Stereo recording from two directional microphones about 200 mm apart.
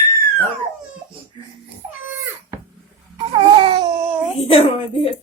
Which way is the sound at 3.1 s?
25° right (ahead or behind).